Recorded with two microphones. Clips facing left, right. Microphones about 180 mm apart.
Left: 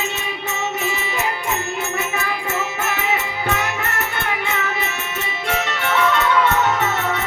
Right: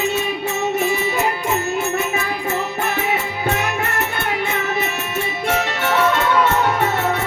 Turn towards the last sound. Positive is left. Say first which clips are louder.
# right 2 dB
turn(degrees=-50)  # may be behind; listen again after turning